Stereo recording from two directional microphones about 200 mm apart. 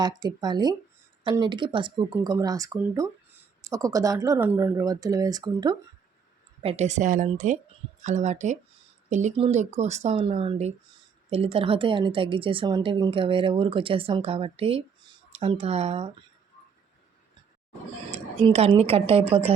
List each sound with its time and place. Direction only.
0.0 s a woman's voice: 20° right (ahead or behind)
6.6 s a woman's voice: 30° right (ahead or behind)
18.1 s a woman's voice: 30° right (ahead or behind)